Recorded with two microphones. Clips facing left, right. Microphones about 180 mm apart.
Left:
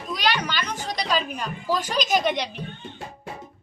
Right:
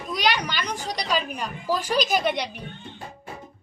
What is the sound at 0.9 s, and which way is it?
A woman's voice, 10° right (ahead or behind).